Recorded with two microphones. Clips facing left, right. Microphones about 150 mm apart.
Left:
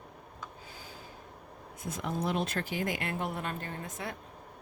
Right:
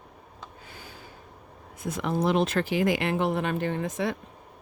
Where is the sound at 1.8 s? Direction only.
90° right.